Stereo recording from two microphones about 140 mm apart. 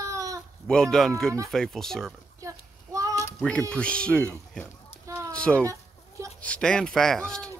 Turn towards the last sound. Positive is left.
turn(degrees=5)  # may be behind; listen again after turning